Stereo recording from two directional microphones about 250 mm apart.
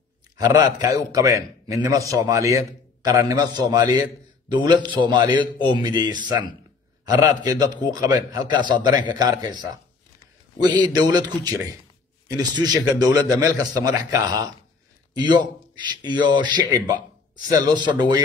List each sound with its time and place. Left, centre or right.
0.4 s a man's voice: centre
10.8 s a man's voice: centre